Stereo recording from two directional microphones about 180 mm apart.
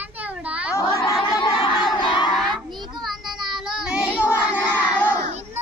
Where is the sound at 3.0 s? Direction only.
Centre (ahead or behind).